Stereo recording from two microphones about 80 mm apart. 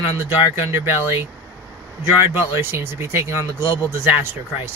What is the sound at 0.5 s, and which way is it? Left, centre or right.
Speech, right.